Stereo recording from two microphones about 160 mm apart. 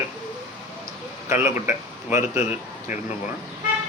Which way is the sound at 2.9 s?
15° right (ahead or behind).